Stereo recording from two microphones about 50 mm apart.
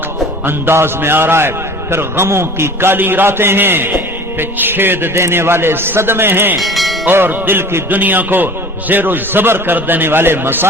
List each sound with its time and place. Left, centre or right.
0.4 s a man's voice: right
5.1 s a man's voice: right
6.6 s speech: centre
7.0 s a man's voice: right